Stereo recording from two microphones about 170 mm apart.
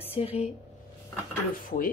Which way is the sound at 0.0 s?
35° left (ahead or behind).